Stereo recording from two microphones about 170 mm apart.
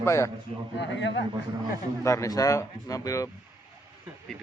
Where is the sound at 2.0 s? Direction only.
20° left (ahead or behind).